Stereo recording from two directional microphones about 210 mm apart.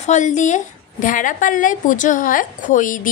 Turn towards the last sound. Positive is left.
turn(degrees=40)  # may be behind; listen again after turning